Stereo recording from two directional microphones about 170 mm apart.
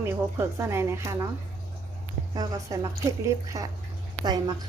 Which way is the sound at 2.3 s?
20° right (ahead or behind).